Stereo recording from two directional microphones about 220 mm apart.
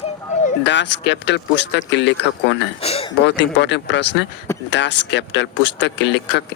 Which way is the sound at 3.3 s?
50° left (ahead or behind).